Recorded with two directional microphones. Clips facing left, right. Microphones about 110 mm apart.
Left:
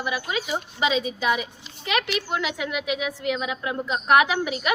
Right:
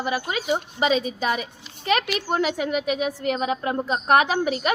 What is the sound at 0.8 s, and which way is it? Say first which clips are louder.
A woman's voice: even; 40° right (ahead or behind).